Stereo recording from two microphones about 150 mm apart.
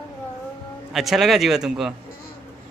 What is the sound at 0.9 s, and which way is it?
Speech, centre (ahead or behind).